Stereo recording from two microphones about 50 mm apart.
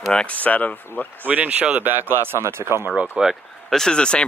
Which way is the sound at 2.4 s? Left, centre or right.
Right.